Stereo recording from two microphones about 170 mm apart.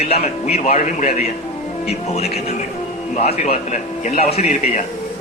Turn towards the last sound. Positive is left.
turn(degrees=40)  # may be behind; listen again after turning